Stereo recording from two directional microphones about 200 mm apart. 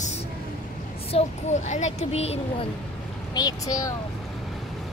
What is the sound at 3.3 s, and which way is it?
Speech, 20° left (ahead or behind).